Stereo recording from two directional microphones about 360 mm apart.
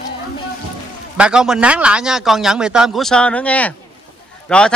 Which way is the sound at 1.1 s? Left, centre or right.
Centre.